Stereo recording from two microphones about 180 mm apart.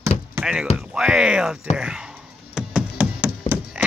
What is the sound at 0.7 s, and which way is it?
Speech, 5° right (ahead or behind).